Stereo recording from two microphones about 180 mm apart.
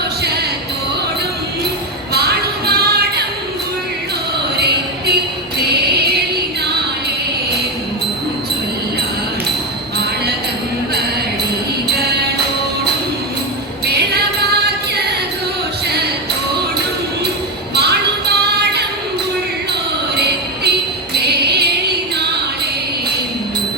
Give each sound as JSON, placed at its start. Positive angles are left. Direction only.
{"t": 2.1, "sound": "music", "side_deg": -60}
{"t": 4.5, "sound": "music", "side_deg": -65}
{"t": 13.8, "sound": "music", "side_deg": -65}
{"t": 17.7, "sound": "a sound", "side_deg": -65}
{"t": 20.1, "sound": "music", "side_deg": -65}